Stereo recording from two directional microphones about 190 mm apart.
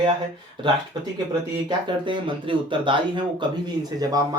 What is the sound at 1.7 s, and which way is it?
Speech, 25° right (ahead or behind).